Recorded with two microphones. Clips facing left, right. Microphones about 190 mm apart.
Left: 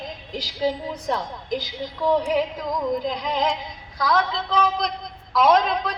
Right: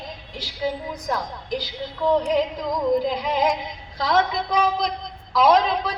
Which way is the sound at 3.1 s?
5° right (ahead or behind).